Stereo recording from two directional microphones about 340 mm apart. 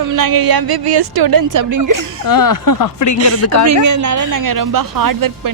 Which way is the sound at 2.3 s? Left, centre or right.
Left.